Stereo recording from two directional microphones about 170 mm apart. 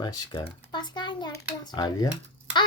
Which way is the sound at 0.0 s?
25° left (ahead or behind).